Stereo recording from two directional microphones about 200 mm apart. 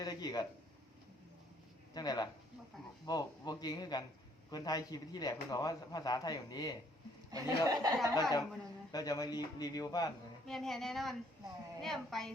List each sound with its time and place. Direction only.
0.0 s a sound: 20° left (ahead or behind)
1.9 s a man's voice: 20° left (ahead or behind)
7.3 s speech: 20° right (ahead or behind)
8.1 s a man's voice: 20° left (ahead or behind)
10.4 s speech: centre (ahead or behind)